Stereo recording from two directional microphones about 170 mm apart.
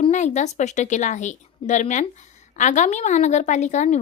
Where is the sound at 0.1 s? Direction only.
45° left (ahead or behind).